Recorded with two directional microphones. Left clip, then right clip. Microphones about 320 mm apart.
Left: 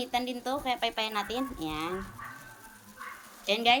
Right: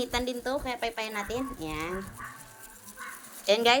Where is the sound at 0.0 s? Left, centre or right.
Centre.